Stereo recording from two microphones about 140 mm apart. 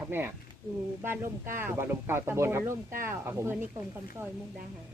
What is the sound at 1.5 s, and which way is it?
Speech, 15° right (ahead or behind).